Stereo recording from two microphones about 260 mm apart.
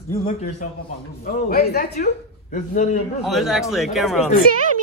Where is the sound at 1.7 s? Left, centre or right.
Left.